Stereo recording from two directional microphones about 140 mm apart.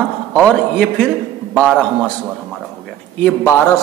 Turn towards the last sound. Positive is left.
turn(degrees=15)  # may be behind; listen again after turning